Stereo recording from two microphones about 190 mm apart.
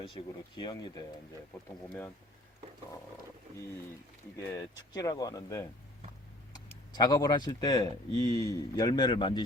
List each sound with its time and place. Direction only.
0.1 s speech: 25° left (ahead or behind)
4.4 s speech: 15° left (ahead or behind)